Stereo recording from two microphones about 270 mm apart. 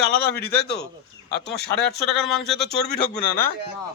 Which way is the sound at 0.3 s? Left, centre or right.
Left.